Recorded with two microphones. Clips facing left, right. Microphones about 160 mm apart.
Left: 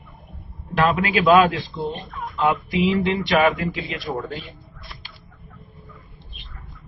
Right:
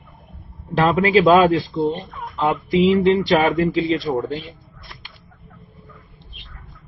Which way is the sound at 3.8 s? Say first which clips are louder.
Right 9 dB; 25° right (ahead or behind).